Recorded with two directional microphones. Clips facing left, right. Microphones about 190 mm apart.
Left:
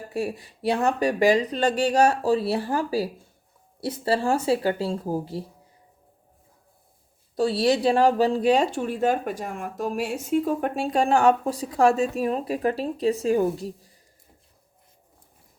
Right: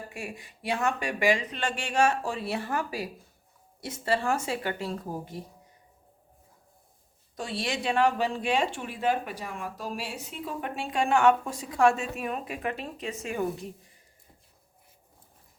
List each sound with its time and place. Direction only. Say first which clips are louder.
0.1 s speech: left 11 dB; 35° left (ahead or behind)
7.3 s speech: left 11 dB; 35° left (ahead or behind)